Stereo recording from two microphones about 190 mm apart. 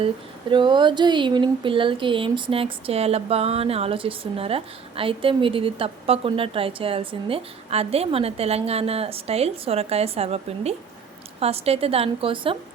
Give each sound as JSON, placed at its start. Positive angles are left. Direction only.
{"t": 0.5, "sound": "a woman's voice", "side_deg": -25}